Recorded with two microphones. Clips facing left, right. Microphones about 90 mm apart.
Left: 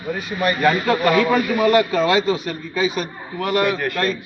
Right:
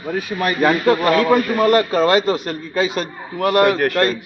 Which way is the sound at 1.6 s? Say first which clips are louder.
Right 2 dB; 50° right (ahead or behind).